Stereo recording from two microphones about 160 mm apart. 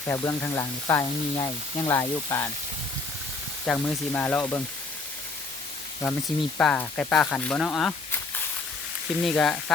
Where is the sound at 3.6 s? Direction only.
10° left (ahead or behind).